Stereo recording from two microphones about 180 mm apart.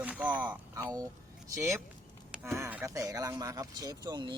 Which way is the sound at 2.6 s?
10° right (ahead or behind).